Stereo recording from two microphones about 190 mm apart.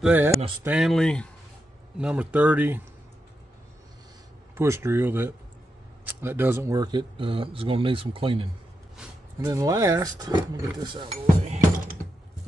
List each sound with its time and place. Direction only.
0.0 s speech: 10° right (ahead or behind)
4.6 s speech: 10° right (ahead or behind); by 8.5 s 30° right (ahead or behind)
8.9 s a sound: 5° right (ahead or behind)
9.5 s speech: 15° right (ahead or behind); by 11.6 s 35° right (ahead or behind)